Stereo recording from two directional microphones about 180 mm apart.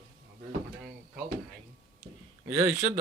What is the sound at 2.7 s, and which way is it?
Speech, 40° right (ahead or behind).